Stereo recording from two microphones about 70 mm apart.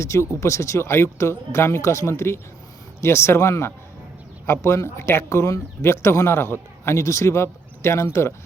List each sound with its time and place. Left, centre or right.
0.0 s a man's voice: left